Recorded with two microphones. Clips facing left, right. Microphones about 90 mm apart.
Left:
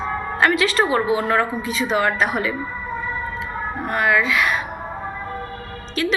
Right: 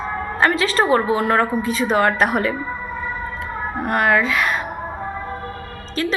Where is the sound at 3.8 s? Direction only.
50° right (ahead or behind).